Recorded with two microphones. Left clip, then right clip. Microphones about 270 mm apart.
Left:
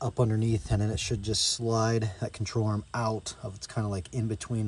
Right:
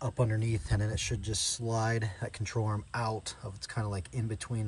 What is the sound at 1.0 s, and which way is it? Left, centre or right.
Speech, left.